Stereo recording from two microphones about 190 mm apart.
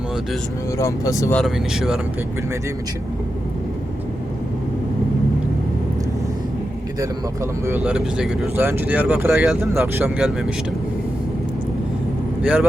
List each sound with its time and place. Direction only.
0.8 s speech: 15° left (ahead or behind)
1.4 s speech: centre (ahead or behind)
7.7 s speech: 5° right (ahead or behind)
12.4 s speech: 5° right (ahead or behind)